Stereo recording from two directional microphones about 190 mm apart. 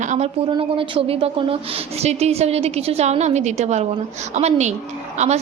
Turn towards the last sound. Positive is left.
turn(degrees=-35)  # may be behind; listen again after turning